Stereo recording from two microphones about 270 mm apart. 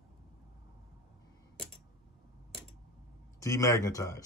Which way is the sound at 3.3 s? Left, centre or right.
Centre.